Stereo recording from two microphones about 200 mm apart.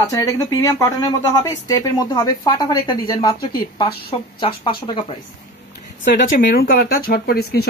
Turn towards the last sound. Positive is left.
turn(degrees=50)  # may be behind; listen again after turning